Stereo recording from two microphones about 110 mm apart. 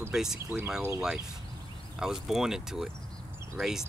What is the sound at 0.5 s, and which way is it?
Speech, 20° right (ahead or behind).